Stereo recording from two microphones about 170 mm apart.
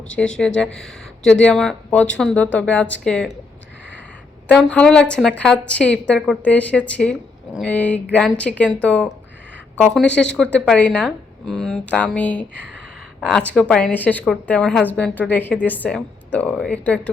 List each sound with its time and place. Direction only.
0.2 s speech: 5° left (ahead or behind)
4.4 s a woman's voice: 5° left (ahead or behind)